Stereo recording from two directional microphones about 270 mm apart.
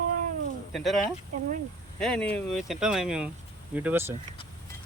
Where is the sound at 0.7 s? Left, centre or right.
Centre.